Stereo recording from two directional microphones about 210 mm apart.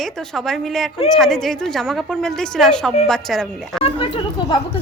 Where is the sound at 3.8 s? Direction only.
25° left (ahead or behind).